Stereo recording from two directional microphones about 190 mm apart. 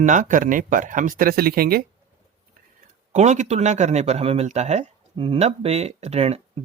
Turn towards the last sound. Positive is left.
turn(degrees=-35)  # may be behind; listen again after turning